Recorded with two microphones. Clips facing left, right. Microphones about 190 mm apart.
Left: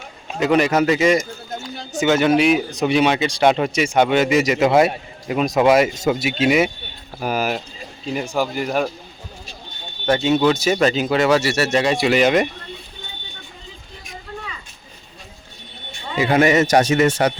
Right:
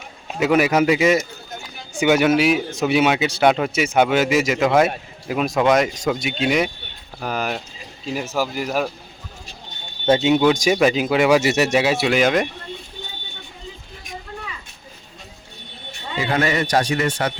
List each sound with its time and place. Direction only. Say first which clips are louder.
0.3 s speech: even; 5° right (ahead or behind)
10.1 s speech: right 1 dB; 20° right (ahead or behind); by 12.5 s centre (ahead or behind)
16.3 s speech: left 5 dB; 20° left (ahead or behind)